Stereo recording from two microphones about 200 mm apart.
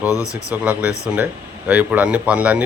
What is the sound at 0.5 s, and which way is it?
Speech, 10° right (ahead or behind).